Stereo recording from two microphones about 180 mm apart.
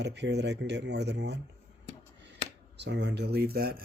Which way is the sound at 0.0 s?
70° right (ahead or behind).